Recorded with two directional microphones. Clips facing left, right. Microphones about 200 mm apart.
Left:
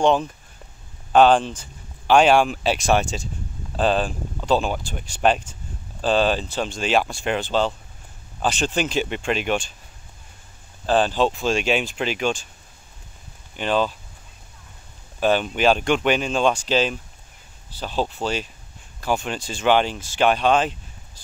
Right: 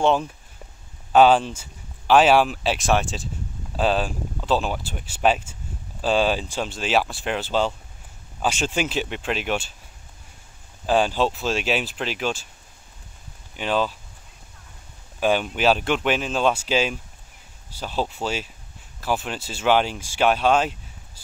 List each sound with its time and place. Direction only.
0.0 s speech: 5° right (ahead or behind)
10.9 s speech: 10° right (ahead or behind)
13.6 s speech: 5° right (ahead or behind)
15.1 s speech: 10° right (ahead or behind)